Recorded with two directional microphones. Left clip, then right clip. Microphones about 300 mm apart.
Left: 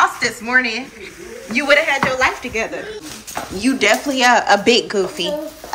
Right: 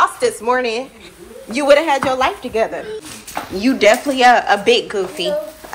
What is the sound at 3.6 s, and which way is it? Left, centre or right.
Speech, centre.